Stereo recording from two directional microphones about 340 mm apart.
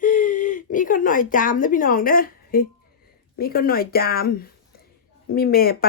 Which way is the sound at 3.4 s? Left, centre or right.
Left.